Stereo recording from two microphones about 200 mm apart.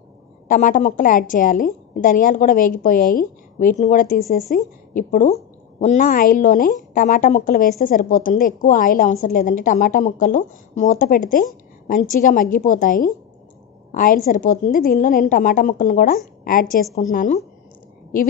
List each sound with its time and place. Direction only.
0.5 s a woman's voice: 40° left (ahead or behind)